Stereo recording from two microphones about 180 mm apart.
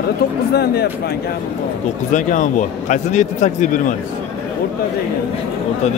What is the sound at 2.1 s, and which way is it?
A man's voice, 45° left (ahead or behind).